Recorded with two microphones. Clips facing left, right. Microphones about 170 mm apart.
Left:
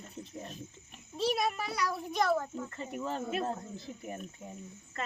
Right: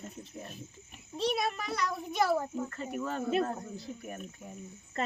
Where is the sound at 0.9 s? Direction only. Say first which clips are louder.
Even; centre (ahead or behind).